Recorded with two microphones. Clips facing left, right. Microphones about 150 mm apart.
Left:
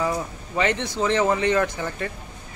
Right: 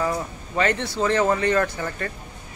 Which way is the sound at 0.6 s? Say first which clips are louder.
Right 1 dB; 15° left (ahead or behind).